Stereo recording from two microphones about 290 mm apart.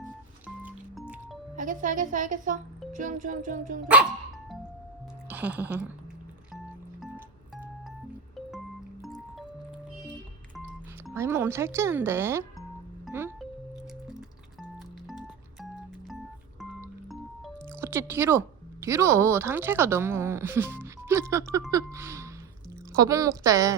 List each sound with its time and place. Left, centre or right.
0.4 s music: centre
1.5 s a woman's voice: right
5.3 s speech: centre
11.1 s speech: centre
13.1 s music: centre
16.0 s organ: centre
17.1 s speech: centre